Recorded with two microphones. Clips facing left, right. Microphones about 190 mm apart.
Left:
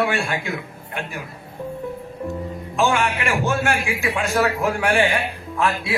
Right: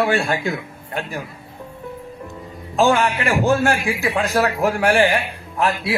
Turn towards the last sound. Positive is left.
turn(degrees=-40)  # may be behind; listen again after turning